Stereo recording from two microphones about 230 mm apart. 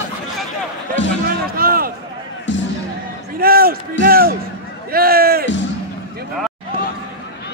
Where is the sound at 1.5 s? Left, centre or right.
Right.